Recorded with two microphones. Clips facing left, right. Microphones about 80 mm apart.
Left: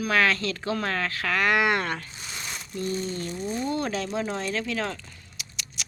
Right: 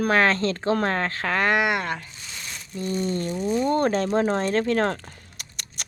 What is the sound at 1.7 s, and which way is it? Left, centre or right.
Speech, centre.